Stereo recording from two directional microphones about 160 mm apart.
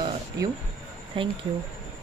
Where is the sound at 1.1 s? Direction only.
30° right (ahead or behind).